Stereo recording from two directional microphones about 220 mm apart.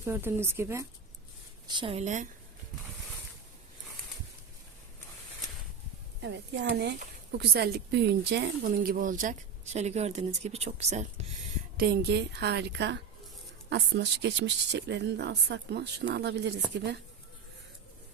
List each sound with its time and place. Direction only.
0.0 s speech: 10° right (ahead or behind); by 2.2 s 30° right (ahead or behind)
6.2 s speech: 55° right (ahead or behind); by 11.3 s 30° right (ahead or behind)
11.8 s speech: 45° right (ahead or behind)